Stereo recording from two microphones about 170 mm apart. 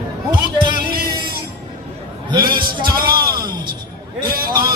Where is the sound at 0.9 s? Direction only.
60° right (ahead or behind).